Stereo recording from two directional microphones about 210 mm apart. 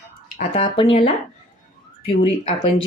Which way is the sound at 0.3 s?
30° left (ahead or behind).